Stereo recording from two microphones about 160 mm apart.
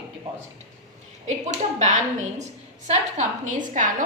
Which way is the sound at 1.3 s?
45° right (ahead or behind).